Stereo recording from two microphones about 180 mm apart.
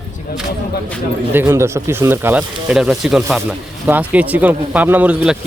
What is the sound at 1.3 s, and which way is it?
Speech, 15° right (ahead or behind).